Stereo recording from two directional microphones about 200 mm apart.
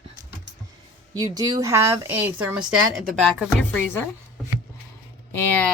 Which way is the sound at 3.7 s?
10° left (ahead or behind).